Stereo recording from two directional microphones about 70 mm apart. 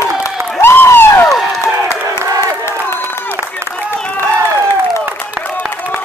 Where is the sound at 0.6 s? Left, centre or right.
Left.